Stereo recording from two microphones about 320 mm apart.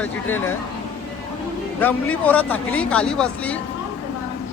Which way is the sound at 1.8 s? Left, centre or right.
Centre.